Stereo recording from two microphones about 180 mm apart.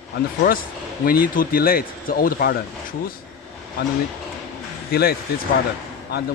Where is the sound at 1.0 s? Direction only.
55° left (ahead or behind).